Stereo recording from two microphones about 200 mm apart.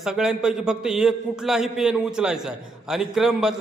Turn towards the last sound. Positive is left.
turn(degrees=-5)  # may be behind; listen again after turning